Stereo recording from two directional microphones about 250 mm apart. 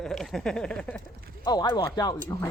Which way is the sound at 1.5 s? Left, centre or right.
Centre.